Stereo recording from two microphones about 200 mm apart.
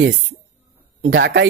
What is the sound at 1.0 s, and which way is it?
Speech, 60° right (ahead or behind).